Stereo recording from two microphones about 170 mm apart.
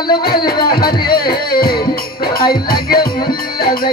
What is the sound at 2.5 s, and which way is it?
Music, 60° left (ahead or behind).